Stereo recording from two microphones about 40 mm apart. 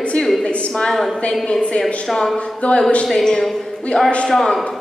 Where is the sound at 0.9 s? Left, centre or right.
Centre.